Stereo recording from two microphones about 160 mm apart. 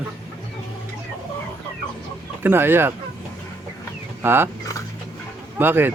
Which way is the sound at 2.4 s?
15° right (ahead or behind).